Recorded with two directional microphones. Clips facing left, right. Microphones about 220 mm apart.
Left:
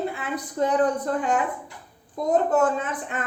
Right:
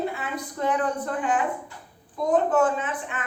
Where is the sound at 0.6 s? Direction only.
40° left (ahead or behind).